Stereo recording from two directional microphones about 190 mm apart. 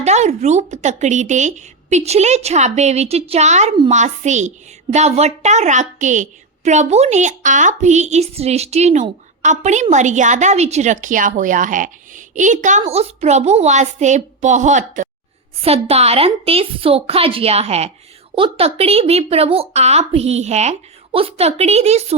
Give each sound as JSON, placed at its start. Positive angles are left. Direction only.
{"t": 0.0, "sound": "a woman's voice", "side_deg": -35}